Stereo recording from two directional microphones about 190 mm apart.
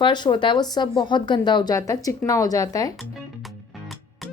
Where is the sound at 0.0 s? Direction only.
25° left (ahead or behind).